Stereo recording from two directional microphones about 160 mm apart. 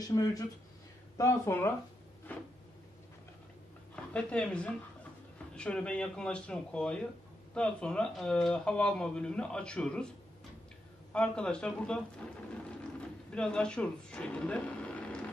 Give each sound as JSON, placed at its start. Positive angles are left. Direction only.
{"t": 0.1, "sound": "speech", "side_deg": 20}
{"t": 2.3, "sound": "a sound", "side_deg": 10}
{"t": 3.9, "sound": "a woman's voice", "side_deg": 5}
{"t": 11.1, "sound": "speech", "side_deg": 5}
{"t": 13.3, "sound": "speech", "side_deg": 5}